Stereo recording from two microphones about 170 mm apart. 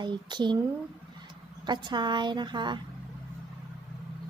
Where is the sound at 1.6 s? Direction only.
25° right (ahead or behind).